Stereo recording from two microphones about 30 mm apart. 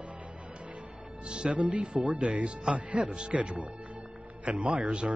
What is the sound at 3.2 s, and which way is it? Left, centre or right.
Speech, right.